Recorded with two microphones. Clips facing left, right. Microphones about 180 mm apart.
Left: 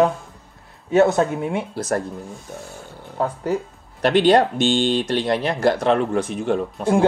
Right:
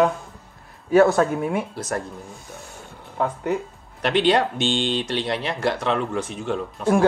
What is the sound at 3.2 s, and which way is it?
Speech, 35° left (ahead or behind).